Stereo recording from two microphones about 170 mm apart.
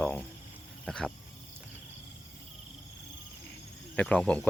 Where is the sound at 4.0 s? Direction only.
5° left (ahead or behind).